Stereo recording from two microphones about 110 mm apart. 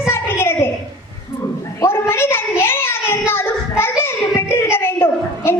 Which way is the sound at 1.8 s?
20° left (ahead or behind).